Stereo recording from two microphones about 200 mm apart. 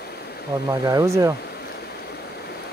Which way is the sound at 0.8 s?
15° right (ahead or behind).